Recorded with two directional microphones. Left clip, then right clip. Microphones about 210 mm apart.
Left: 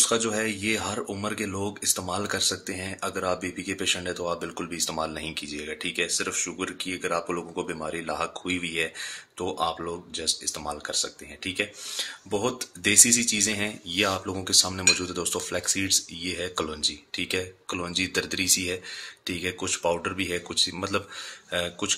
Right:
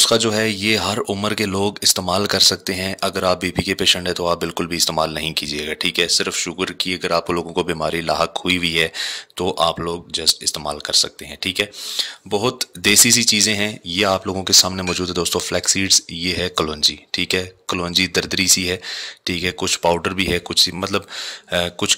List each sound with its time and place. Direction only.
0.0 s speech: 40° right (ahead or behind)